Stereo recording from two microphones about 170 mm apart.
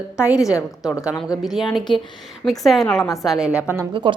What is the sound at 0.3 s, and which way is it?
Speech, 20° left (ahead or behind).